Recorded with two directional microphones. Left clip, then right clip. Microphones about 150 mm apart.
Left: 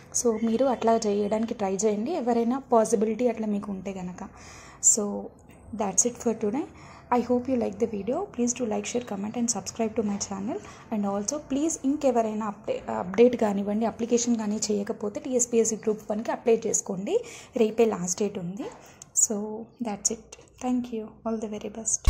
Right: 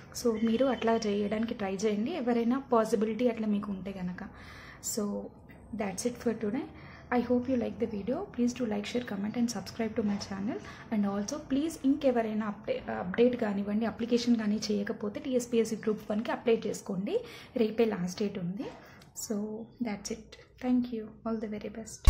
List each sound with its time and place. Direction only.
0.3 s a woman's voice: 15° left (ahead or behind)
5.8 s a woman's voice: 20° left (ahead or behind)
13.1 s a woman's voice: 40° left (ahead or behind); by 21.8 s 15° left (ahead or behind)